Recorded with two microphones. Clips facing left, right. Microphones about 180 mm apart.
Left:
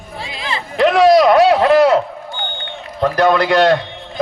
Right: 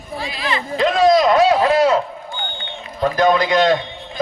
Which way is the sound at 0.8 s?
70° left (ahead or behind).